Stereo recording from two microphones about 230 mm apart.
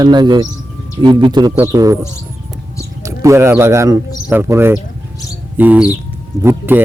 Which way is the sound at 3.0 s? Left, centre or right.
Centre.